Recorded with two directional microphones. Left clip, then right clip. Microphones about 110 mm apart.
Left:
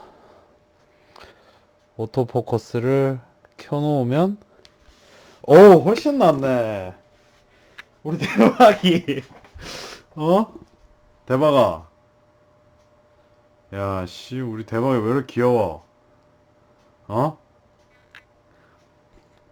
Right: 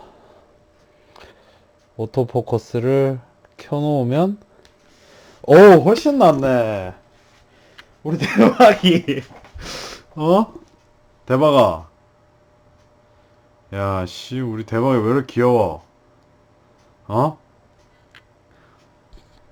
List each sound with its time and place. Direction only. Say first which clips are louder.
0.0 s a sound: right 1 dB; 15° left (ahead or behind)
2.0 s speech: right 2 dB; 15° left (ahead or behind)
3.2 s a sound: right 1 dB; 15° left (ahead or behind)
3.9 s speech: right 2 dB; 5° left (ahead or behind); by 6.3 s 15° right (ahead or behind)
6.3 s speech: right 3 dB; 5° right (ahead or behind)
13.7 s speech: right 3 dB; 5° right (ahead or behind)
17.1 s speech: right 3 dB; centre (ahead or behind)